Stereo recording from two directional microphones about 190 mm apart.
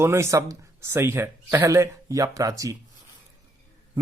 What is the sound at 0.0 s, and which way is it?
Speech, 15° right (ahead or behind).